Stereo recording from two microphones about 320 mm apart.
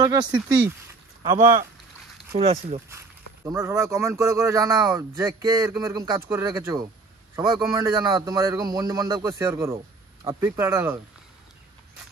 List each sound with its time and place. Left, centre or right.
0.0 s speech: centre